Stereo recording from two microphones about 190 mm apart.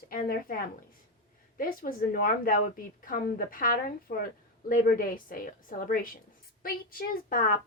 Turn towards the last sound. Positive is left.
turn(degrees=50)  # may be behind; listen again after turning